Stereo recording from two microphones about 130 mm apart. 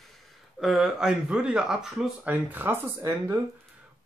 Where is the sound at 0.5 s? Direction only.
5° right (ahead or behind).